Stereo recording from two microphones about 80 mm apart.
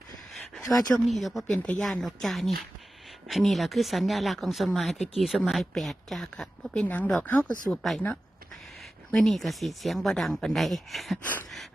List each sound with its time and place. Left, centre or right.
0.5 s speech: centre
6.8 s speech: left; by 11.2 s centre
11.2 s speech: left